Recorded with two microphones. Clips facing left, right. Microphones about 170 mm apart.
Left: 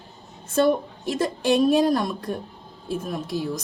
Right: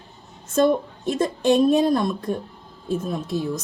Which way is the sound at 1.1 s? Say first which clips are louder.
Right 2 dB; 10° left (ahead or behind).